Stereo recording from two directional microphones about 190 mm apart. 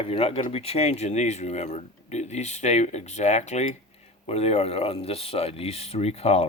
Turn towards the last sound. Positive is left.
turn(degrees=35)  # may be behind; listen again after turning